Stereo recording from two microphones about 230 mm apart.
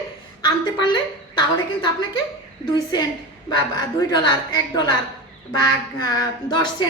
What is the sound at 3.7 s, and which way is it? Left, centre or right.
A woman's voice, centre.